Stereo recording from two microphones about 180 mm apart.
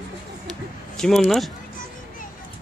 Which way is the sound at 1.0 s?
Centre (ahead or behind).